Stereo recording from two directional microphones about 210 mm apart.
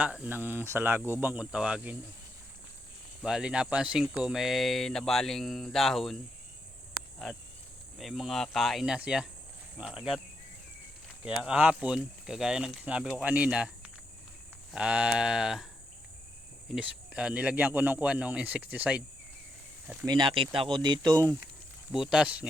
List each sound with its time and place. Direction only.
0.0 s speech: 5° right (ahead or behind)
3.2 s speech: 5° right (ahead or behind)
7.9 s speech: centre (ahead or behind)
11.3 s speech: 5° right (ahead or behind)
14.7 s speech: 5° right (ahead or behind)
16.7 s speech: 5° right (ahead or behind)
20.1 s speech: 20° right (ahead or behind)
21.9 s speech: 5° right (ahead or behind)